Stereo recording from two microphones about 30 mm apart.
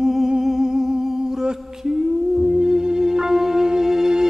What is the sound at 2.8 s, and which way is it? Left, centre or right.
Music, centre.